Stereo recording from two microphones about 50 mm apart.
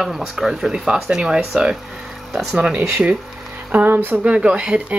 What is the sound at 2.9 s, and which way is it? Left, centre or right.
Speech, right.